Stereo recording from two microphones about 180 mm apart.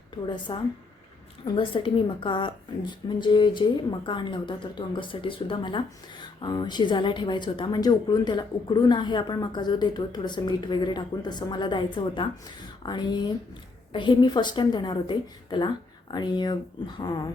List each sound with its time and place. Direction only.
0.3 s speech: 25° left (ahead or behind)